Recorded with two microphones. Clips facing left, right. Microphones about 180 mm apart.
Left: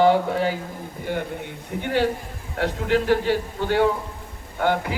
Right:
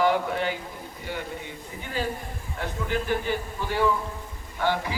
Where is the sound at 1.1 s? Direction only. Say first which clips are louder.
Left 6 dB; 55° left (ahead or behind).